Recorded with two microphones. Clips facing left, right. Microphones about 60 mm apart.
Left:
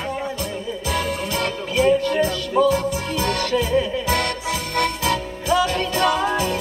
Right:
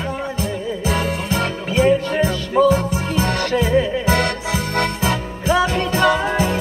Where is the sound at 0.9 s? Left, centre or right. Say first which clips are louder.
Right 1 dB; right.